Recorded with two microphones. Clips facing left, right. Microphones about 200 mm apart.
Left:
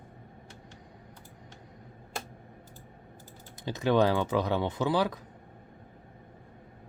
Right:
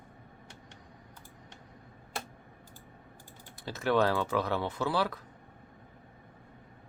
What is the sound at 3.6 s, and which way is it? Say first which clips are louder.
Speech: left 3 dB; 15° left (ahead or behind).